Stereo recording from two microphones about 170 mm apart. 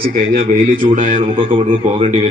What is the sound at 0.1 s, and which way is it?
A man's voice, 55° right (ahead or behind).